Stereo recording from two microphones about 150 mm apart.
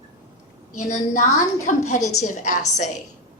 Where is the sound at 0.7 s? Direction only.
55° left (ahead or behind).